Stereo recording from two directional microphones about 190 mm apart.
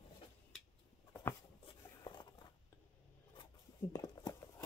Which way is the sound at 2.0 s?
25° left (ahead or behind).